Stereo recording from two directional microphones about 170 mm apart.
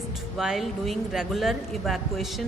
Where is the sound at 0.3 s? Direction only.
Centre (ahead or behind).